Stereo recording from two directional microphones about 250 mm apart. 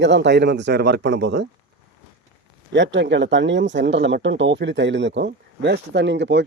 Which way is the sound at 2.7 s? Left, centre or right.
Right.